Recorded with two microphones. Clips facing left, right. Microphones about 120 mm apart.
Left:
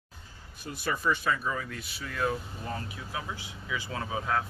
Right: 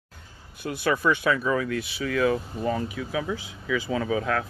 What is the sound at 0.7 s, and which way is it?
Speech, 70° right (ahead or behind).